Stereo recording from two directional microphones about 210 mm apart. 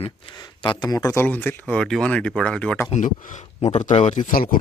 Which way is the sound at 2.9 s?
35° left (ahead or behind).